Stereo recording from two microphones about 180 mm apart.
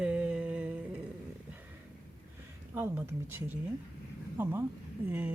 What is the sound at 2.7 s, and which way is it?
Speech, 10° right (ahead or behind).